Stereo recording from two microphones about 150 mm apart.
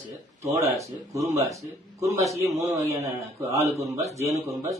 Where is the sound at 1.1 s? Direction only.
20° right (ahead or behind).